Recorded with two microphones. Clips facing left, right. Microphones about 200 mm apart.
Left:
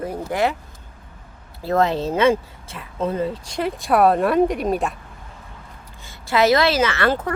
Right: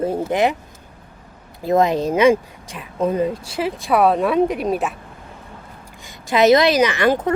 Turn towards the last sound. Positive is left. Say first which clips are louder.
# right 3 dB
turn(degrees=-15)  # may be behind; listen again after turning